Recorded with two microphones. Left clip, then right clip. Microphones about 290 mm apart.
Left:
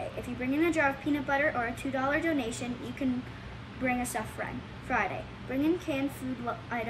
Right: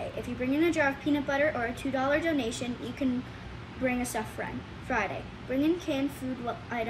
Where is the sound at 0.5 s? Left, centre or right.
Centre.